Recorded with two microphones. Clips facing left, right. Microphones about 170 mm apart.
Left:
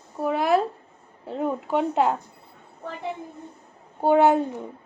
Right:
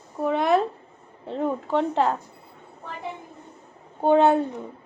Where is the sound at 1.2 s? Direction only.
5° left (ahead or behind).